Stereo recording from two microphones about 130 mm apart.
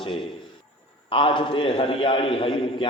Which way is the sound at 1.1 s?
40° left (ahead or behind).